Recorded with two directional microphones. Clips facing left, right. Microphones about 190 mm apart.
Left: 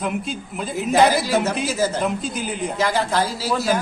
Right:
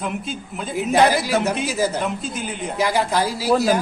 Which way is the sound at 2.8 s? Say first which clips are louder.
Right 1 dB; 15° right (ahead or behind).